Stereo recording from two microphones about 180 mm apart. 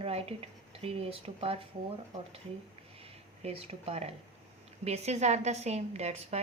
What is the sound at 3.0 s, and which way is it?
A woman's voice, 35° right (ahead or behind).